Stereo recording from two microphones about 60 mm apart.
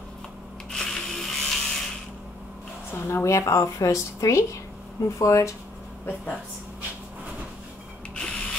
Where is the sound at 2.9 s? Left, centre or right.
Left.